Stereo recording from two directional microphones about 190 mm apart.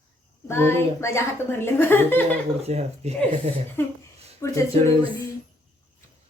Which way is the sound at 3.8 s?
10° left (ahead or behind).